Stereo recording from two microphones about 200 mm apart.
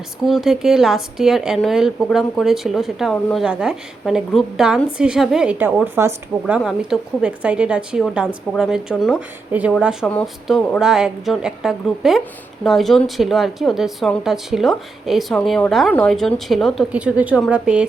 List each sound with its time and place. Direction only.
0.3 s a woman's voice: centre (ahead or behind)